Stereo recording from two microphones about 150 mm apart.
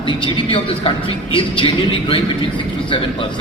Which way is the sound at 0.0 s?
35° left (ahead or behind).